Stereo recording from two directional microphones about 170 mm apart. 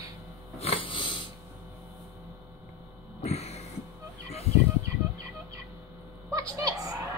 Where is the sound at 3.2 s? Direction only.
40° left (ahead or behind).